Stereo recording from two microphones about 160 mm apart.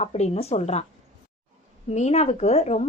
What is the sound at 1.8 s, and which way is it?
Speech, 45° left (ahead or behind).